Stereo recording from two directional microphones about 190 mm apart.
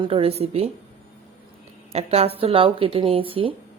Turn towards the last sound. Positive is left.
turn(degrees=-30)  # may be behind; listen again after turning